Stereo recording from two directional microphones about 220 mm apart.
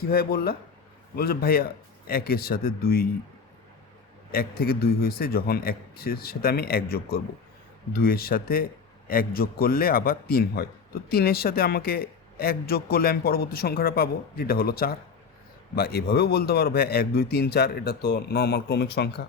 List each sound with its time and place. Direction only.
0.1 s a man's voice: 45° left (ahead or behind)
4.3 s a man's voice: 45° left (ahead or behind)